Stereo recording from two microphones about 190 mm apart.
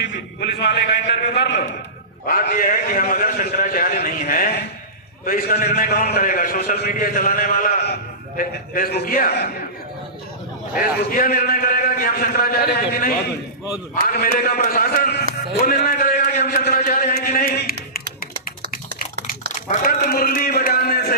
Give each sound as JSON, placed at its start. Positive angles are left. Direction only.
{"t": 0.0, "sound": "a man's voice", "side_deg": 65}
{"t": 2.2, "sound": "a man's voice", "side_deg": 50}
{"t": 11.1, "sound": "a man's voice", "side_deg": 50}
{"t": 18.4, "sound": "a sound", "side_deg": 50}